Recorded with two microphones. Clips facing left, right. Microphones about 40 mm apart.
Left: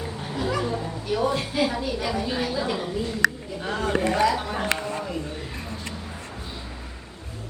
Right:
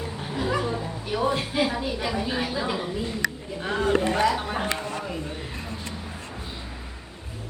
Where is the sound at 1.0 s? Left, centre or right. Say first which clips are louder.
Left 1 dB; centre.